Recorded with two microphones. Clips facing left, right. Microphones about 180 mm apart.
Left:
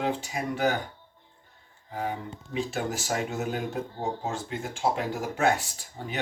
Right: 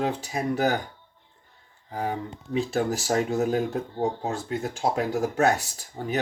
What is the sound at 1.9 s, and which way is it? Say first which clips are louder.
Speech: right 3 dB; 40° right (ahead or behind).